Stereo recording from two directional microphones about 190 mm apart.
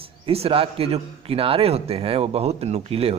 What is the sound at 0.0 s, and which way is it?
A man's voice, 30° right (ahead or behind).